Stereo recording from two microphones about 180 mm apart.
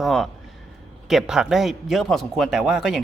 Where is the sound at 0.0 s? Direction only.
Centre (ahead or behind).